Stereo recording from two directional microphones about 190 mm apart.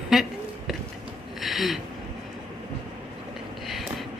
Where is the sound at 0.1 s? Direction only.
Centre (ahead or behind).